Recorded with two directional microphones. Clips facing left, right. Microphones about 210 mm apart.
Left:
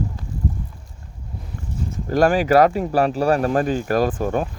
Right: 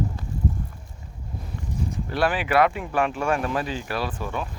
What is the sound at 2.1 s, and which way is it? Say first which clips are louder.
Speech: left 8 dB; 45° left (ahead or behind).